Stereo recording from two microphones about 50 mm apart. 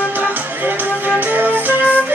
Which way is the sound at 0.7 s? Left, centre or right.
Right.